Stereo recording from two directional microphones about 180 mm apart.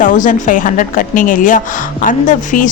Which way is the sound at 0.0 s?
45° left (ahead or behind).